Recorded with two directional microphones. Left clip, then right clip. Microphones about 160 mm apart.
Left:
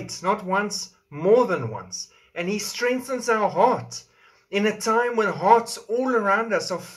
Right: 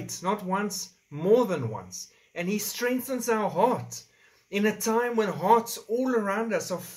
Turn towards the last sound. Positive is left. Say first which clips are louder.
# left 5 dB
turn(degrees=-20)  # may be behind; listen again after turning